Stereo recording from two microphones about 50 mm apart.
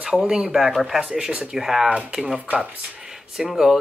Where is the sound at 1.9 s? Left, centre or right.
Right.